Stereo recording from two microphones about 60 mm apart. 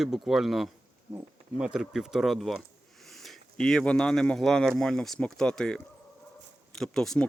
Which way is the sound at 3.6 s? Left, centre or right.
Centre.